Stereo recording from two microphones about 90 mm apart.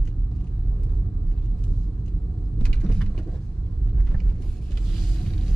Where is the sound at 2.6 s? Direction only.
20° left (ahead or behind).